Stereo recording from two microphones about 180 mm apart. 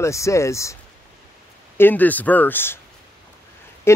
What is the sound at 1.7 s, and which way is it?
A man's voice, 10° left (ahead or behind).